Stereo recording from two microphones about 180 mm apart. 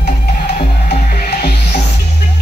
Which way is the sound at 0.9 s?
50° left (ahead or behind).